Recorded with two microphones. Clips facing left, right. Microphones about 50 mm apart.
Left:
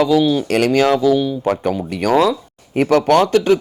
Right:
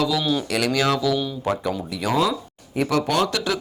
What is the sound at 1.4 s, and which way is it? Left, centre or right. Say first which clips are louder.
Speech: left 6 dB; left.